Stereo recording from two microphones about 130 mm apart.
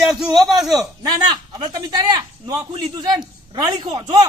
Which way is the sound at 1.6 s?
35° right (ahead or behind).